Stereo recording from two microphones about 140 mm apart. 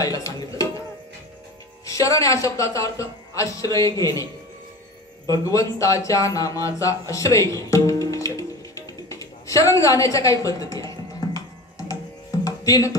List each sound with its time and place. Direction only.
0.0 s speech: 25° left (ahead or behind)
1.9 s a man's voice: 25° left (ahead or behind)
5.3 s speech: 25° left (ahead or behind)
12.4 s music: 25° left (ahead or behind)